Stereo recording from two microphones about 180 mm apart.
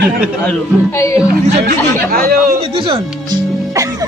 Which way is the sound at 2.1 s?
55° right (ahead or behind).